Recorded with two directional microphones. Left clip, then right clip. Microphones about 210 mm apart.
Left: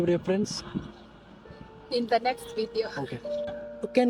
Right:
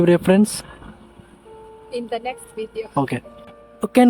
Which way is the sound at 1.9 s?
30° left (ahead or behind).